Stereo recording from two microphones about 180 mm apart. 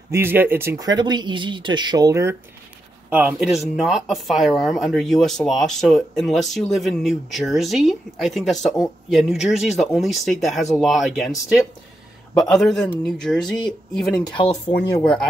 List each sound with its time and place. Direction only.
0.1 s speech: 10° right (ahead or behind)
14.3 s speech: 35° left (ahead or behind)
15.0 s speech: 5° left (ahead or behind)